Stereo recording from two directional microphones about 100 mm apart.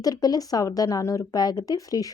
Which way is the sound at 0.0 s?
40° left (ahead or behind).